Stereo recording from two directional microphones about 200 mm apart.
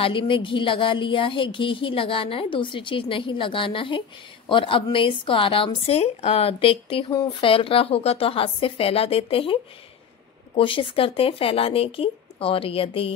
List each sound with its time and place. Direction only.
0.0 s speech: 25° left (ahead or behind)